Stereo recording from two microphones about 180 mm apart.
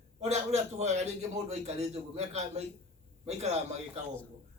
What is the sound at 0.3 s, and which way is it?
A man's voice, 40° right (ahead or behind).